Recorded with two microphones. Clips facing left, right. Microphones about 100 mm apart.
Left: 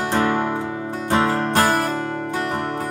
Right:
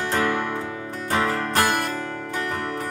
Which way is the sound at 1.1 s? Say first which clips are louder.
Left 4 dB; 20° left (ahead or behind).